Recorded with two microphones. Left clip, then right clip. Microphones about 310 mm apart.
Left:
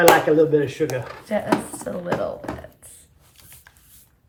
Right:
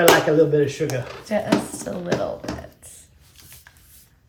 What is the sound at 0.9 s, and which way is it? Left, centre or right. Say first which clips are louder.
Speech: even; centre.